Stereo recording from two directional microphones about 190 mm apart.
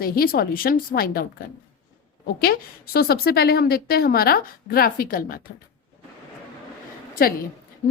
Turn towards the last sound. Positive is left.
turn(degrees=50)  # may be behind; listen again after turning